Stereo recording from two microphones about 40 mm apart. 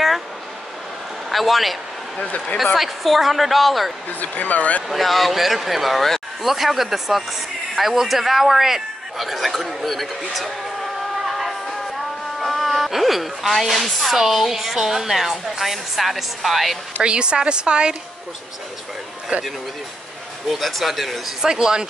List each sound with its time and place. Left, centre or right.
1.3 s speech: centre
4.2 s speech: left
4.8 s a man's voice: centre
17.0 s a woman's voice: right
19.3 s a man's voice: right
20.4 s speech: centre
21.4 s speech: centre